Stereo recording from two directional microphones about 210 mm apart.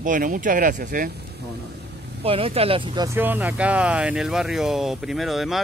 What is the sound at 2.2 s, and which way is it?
Speech, 25° right (ahead or behind).